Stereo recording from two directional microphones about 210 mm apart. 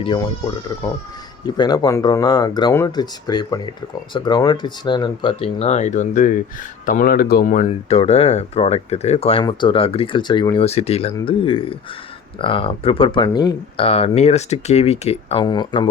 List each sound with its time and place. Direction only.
0.0 s speech: 20° left (ahead or behind)